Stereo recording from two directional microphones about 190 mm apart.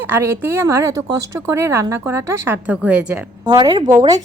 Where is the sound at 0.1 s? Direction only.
10° right (ahead or behind).